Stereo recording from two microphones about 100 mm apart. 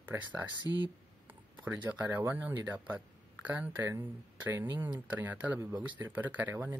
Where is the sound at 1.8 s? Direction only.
15° right (ahead or behind).